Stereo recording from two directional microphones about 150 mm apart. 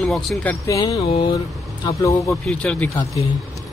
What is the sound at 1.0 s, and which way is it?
Speech, 40° left (ahead or behind).